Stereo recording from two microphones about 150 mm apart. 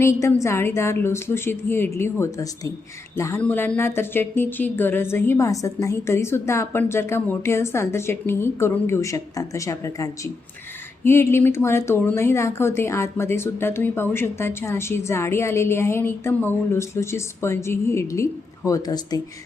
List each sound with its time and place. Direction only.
0.0 s speech: 20° left (ahead or behind)